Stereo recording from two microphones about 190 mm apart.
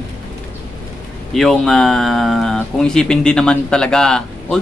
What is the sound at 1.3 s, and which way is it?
Speech, centre (ahead or behind).